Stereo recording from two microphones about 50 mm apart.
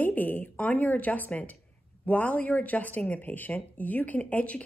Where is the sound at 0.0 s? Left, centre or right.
Left.